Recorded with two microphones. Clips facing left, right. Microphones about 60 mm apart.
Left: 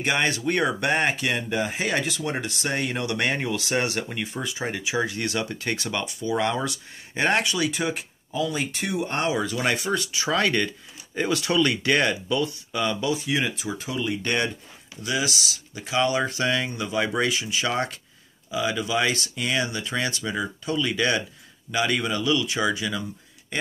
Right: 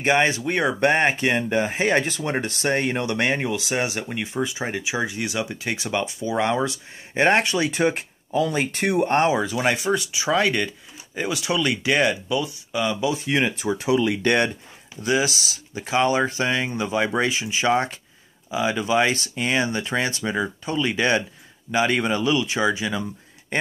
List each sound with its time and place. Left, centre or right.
0.0 s speech: right
0.7 s speech: right
9.3 s speech: centre
13.1 s speech: right
13.6 s speech: right
13.8 s speech: right
14.2 s speech: right
15.0 s speech: right